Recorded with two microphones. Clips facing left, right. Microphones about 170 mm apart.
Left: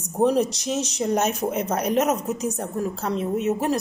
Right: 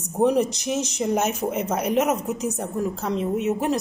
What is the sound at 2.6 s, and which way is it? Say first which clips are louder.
Speech: right 1 dB; 15° right (ahead or behind).